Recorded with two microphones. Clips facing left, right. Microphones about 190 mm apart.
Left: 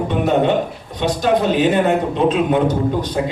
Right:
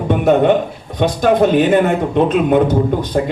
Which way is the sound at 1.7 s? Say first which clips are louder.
Right 2 dB; 50° right (ahead or behind).